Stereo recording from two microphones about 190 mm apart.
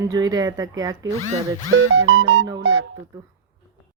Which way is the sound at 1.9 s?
90° right.